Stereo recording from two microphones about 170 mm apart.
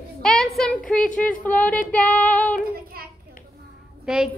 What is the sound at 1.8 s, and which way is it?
Female singing, 10° left (ahead or behind).